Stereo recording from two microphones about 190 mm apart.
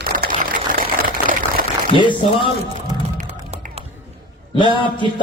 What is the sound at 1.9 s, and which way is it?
Speech, 25° left (ahead or behind).